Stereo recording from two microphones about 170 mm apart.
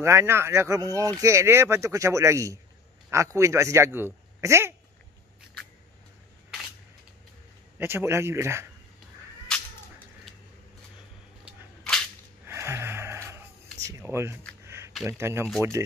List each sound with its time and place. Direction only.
0.0 s speech: 15° right (ahead or behind)
7.8 s speech: 15° right (ahead or behind)
9.5 s a sound: 5° left (ahead or behind)
12.4 s gasp: 15° right (ahead or behind)
13.8 s speech: 15° right (ahead or behind)